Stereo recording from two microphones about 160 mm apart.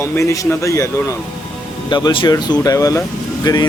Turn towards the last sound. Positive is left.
turn(degrees=25)  # may be behind; listen again after turning